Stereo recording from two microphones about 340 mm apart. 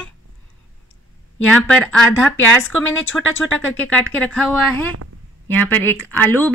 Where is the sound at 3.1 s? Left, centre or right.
Centre.